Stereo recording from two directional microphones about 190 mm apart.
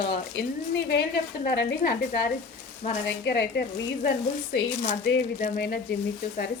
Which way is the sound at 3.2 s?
65° left (ahead or behind).